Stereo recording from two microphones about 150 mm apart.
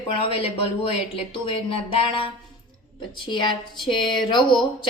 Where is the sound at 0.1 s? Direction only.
40° left (ahead or behind).